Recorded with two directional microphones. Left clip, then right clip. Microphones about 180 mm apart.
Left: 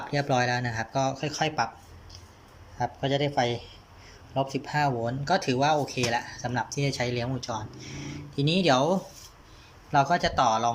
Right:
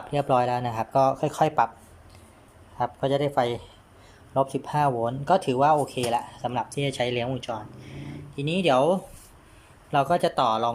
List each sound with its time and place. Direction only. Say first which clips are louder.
0.1 s speech: right 3 dB; 15° right (ahead or behind)
2.7 s speech: right 3 dB; 15° right (ahead or behind)